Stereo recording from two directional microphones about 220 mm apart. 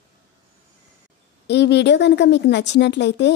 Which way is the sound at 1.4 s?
50° left (ahead or behind).